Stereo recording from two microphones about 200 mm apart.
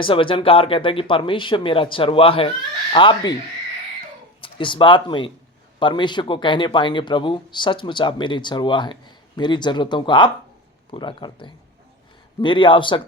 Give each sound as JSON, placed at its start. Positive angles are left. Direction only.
{"t": 0.0, "sound": "speech", "side_deg": 25}
{"t": 4.4, "sound": "speech", "side_deg": 25}